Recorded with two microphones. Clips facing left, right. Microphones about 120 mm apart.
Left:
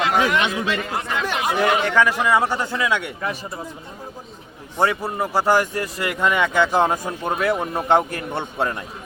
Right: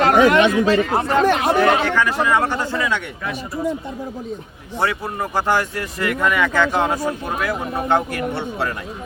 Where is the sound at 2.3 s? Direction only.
10° left (ahead or behind).